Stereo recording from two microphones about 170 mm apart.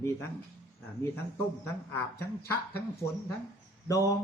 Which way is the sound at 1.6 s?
15° left (ahead or behind).